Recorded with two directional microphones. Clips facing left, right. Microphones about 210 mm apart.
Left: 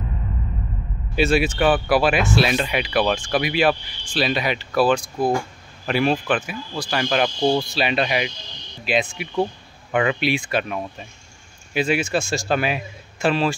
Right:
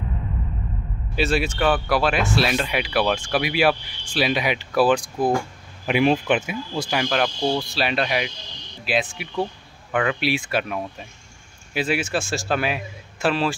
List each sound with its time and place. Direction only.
1.1 s speech: centre (ahead or behind); by 7.0 s 20° right (ahead or behind)
7.0 s speech: centre (ahead or behind)
9.8 s speech: 10° left (ahead or behind)
10.2 s speech: 5° right (ahead or behind)